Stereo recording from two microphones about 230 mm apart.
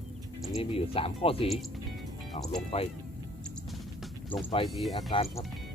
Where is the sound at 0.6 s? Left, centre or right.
Left.